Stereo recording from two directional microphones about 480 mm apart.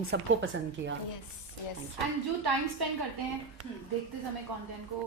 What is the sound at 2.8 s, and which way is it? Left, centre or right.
Speech, right.